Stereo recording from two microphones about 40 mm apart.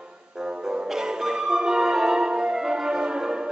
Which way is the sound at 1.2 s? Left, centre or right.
Centre.